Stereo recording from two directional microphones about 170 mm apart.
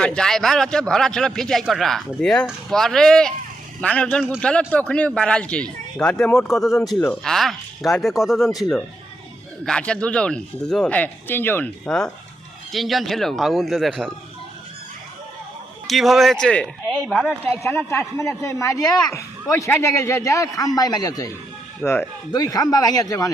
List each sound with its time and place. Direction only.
0.0 s speech: 5° left (ahead or behind)
9.6 s speech: 5° left (ahead or behind)
15.9 s speech: centre (ahead or behind)
17.4 s a man's voice: 15° left (ahead or behind)